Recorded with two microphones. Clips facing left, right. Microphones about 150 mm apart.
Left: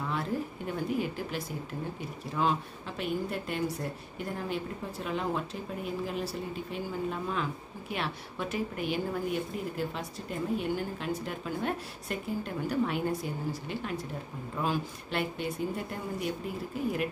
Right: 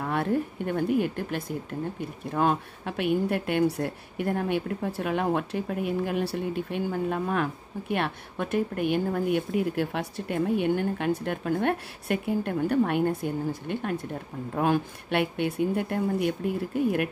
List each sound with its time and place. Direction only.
0.0 s a woman's voice: 60° right (ahead or behind)